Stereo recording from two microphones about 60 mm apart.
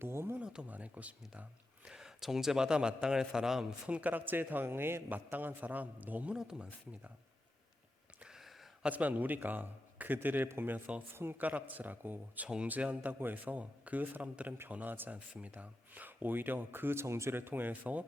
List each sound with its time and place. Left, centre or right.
0.0 s speech: right
0.3 s a man's voice: centre
1.9 s a man's voice: centre
3.8 s speech: right
6.3 s a man's voice: centre
8.2 s a sound: centre
8.8 s speech: right
11.3 s speech: right
15.1 s speech: right